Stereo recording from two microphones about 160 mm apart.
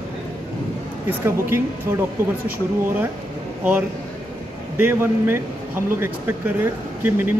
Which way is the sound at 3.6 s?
10° right (ahead or behind).